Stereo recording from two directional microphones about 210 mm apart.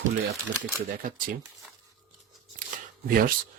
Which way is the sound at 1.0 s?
40° right (ahead or behind).